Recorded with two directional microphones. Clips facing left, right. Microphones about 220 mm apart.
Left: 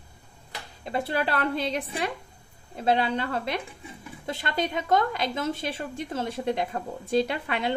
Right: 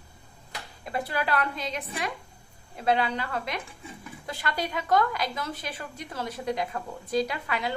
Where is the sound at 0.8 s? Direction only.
25° left (ahead or behind).